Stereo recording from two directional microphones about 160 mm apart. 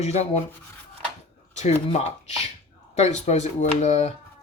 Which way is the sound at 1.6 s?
45° left (ahead or behind).